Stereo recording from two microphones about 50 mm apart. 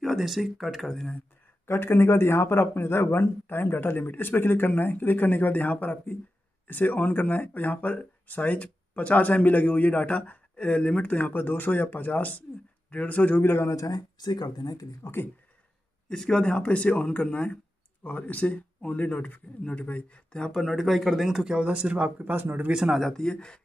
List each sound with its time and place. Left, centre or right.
0.0 s speech: centre
1.7 s a man's voice: left
15.0 s speech: left
16.1 s speech: centre
20.6 s speech: centre
21.5 s speech: right
22.3 s speech: right
22.8 s speech: centre
23.1 s speech: centre